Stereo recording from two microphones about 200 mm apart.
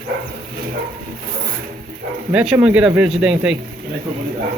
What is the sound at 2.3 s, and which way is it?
Speech, 5° right (ahead or behind).